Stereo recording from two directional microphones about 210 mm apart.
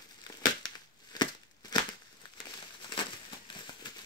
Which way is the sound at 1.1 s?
20° left (ahead or behind).